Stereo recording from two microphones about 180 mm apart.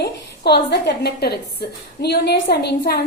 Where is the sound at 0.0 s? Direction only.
65° left (ahead or behind).